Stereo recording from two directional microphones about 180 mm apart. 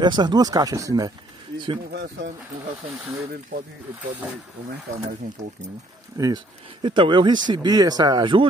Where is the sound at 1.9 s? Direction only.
65° right (ahead or behind).